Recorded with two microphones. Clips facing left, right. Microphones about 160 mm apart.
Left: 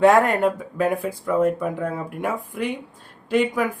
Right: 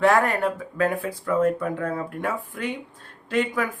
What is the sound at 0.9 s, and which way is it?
Speech, 5° left (ahead or behind).